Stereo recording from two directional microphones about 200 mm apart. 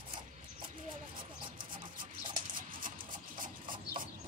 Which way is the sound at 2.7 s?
45° right (ahead or behind).